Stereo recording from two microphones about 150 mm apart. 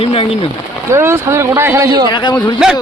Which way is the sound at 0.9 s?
15° right (ahead or behind).